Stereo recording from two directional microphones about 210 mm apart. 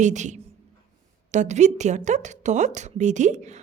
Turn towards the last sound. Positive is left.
turn(degrees=-35)  # may be behind; listen again after turning